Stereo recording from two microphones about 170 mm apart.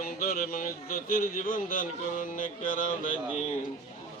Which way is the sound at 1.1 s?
55° left (ahead or behind).